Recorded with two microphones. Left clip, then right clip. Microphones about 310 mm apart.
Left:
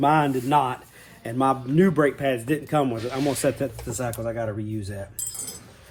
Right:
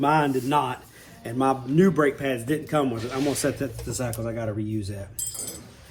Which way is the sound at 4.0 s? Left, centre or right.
Centre.